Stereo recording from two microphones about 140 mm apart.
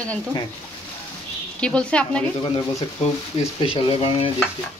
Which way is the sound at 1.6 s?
5° left (ahead or behind).